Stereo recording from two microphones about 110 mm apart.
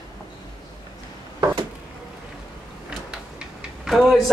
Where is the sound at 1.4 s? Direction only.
40° right (ahead or behind).